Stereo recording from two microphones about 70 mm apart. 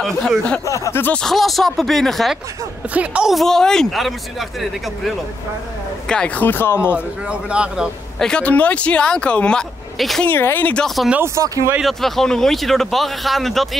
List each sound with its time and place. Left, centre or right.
0.0 s speech: centre
0.7 s a sound: left
1.1 s speech: centre
2.9 s speech: centre
3.3 s speech: centre
6.0 s speech: centre; by 6.9 s left
6.9 s a man's voice: centre
8.2 s speech: centre
9.9 s speech: centre
10.2 s speech: left
11.2 s speech: right
11.8 s speech: centre